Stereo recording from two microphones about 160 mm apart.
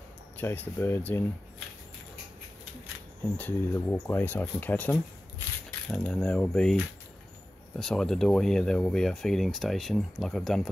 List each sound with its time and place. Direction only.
0.4 s speech: 15° left (ahead or behind)
3.3 s speech: 10° left (ahead or behind)